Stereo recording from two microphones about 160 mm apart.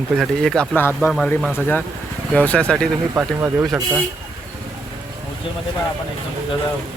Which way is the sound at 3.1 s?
15° right (ahead or behind).